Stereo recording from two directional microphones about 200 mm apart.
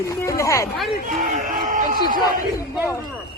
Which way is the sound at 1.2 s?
40° right (ahead or behind).